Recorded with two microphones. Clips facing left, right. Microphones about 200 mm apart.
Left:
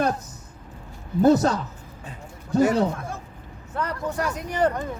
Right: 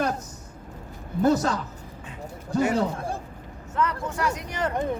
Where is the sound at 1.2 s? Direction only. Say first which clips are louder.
Left 4 dB; 35° left (ahead or behind).